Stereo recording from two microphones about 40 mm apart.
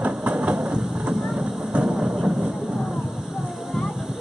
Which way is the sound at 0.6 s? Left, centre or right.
Centre.